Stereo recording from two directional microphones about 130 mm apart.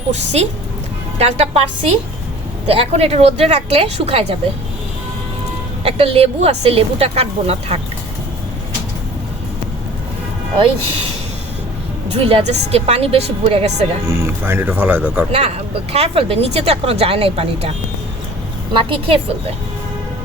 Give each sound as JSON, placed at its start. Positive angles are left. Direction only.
{"t": 0.1, "sound": "a woman's voice", "side_deg": -60}
{"t": 5.8, "sound": "speech", "side_deg": -50}
{"t": 12.1, "sound": "speech", "side_deg": -50}
{"t": 14.1, "sound": "speech", "side_deg": -20}
{"t": 15.3, "sound": "speech", "side_deg": -55}
{"t": 18.7, "sound": "a woman's voice", "side_deg": -40}